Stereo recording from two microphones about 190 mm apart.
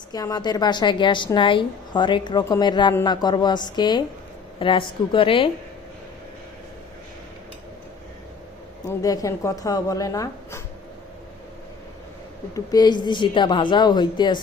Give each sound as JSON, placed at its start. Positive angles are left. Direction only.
{"t": 0.1, "sound": "a woman's voice", "side_deg": 20}
{"t": 8.8, "sound": "speech", "side_deg": 20}
{"t": 12.5, "sound": "a woman's voice", "side_deg": 20}